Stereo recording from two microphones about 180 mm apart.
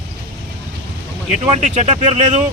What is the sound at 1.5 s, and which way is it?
Speech, 40° right (ahead or behind).